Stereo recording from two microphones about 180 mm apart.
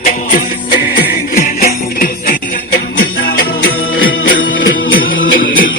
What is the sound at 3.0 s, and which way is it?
Music, 60° left (ahead or behind).